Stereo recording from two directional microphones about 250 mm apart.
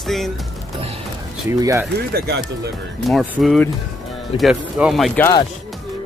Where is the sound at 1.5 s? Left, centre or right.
Centre.